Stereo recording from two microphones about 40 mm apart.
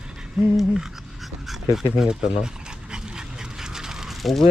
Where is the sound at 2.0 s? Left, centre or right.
Centre.